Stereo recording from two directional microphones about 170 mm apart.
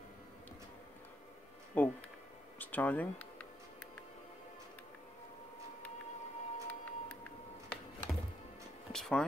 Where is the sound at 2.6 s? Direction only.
10° left (ahead or behind).